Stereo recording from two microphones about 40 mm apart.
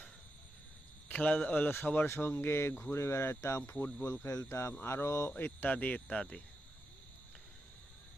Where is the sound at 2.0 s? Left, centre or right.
Left.